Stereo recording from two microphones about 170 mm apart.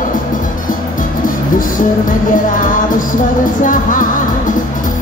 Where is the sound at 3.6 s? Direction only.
50° left (ahead or behind).